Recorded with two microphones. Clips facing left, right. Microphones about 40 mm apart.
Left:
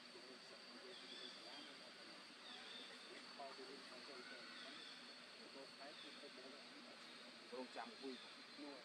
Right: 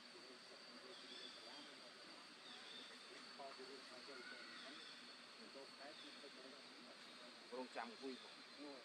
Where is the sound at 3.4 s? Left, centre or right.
Left.